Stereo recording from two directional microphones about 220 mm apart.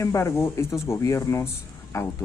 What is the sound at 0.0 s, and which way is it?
Speech, 15° left (ahead or behind).